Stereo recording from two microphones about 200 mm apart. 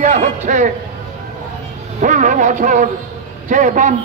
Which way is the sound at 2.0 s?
40° right (ahead or behind).